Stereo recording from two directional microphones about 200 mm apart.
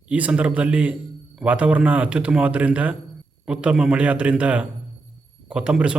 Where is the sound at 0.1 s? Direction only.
5° right (ahead or behind).